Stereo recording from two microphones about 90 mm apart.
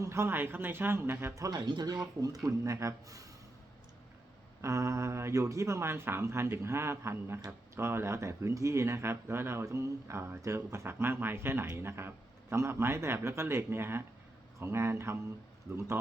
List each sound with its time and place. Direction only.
0.0 s speech: 30° right (ahead or behind)
1.4 s speech: 45° right (ahead or behind)
4.6 s speech: 35° right (ahead or behind)